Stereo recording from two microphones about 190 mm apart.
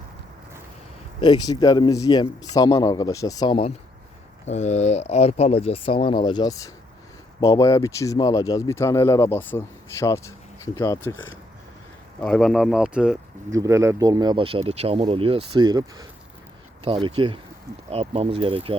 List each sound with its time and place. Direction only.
1.2 s speech: 20° left (ahead or behind)
4.4 s speech: 35° left (ahead or behind); by 13.1 s 5° right (ahead or behind)
13.5 s speech: 15° right (ahead or behind)